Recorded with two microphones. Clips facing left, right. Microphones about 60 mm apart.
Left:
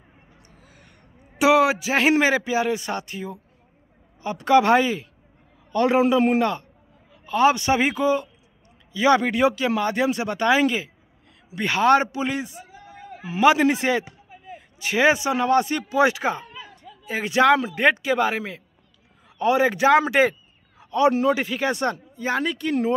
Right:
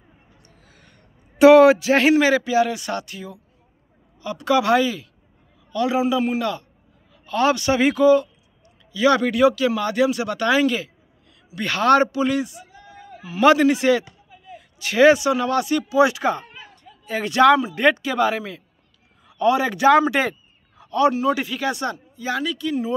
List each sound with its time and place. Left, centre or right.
0.6 s a sound: centre
2.1 s a man's voice: left
5.7 s a man's voice: left
7.2 s a man's voice: centre
13.4 s speech: centre
13.7 s a man's voice: left
16.3 s a sound: centre
17.7 s speech: left
20.8 s a sound: left
21.3 s speech: left